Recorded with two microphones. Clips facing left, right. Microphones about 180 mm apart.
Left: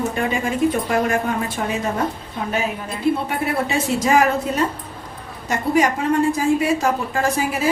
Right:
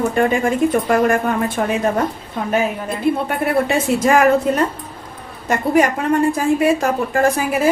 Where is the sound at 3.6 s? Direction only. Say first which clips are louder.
Right 4 dB; 55° right (ahead or behind).